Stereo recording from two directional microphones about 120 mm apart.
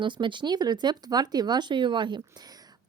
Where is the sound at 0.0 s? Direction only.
40° right (ahead or behind).